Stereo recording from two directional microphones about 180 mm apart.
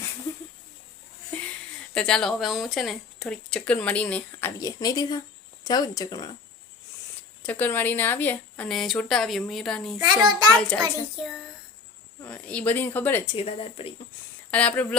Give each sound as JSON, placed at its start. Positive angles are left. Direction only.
{"t": 1.3, "sound": "a sound", "side_deg": 10}
{"t": 1.9, "sound": "speech", "side_deg": 5}
{"t": 7.4, "sound": "a woman's voice", "side_deg": 10}
{"t": 10.0, "sound": "a child's voice", "side_deg": -25}
{"t": 10.5, "sound": "speech", "side_deg": 5}
{"t": 12.2, "sound": "speech", "side_deg": 5}
{"t": 13.3, "sound": "speech", "side_deg": 35}
{"t": 14.5, "sound": "speech", "side_deg": 10}